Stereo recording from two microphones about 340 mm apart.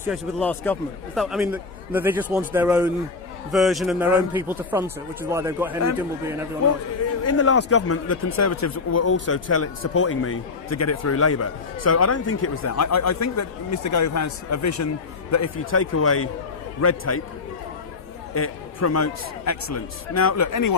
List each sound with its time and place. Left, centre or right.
0.0 s a man's voice: centre
7.3 s speech: left
15.5 s speech: left
18.3 s speech: left